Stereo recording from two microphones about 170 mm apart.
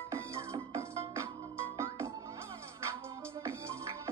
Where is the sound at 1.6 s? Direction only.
15° right (ahead or behind).